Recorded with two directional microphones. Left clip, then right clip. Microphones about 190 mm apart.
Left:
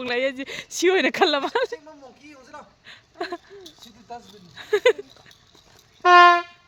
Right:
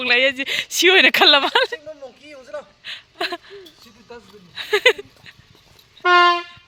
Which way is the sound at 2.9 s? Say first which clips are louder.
Right 6 dB; 5° left (ahead or behind).